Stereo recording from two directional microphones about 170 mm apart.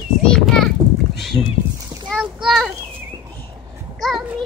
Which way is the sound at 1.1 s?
Centre (ahead or behind).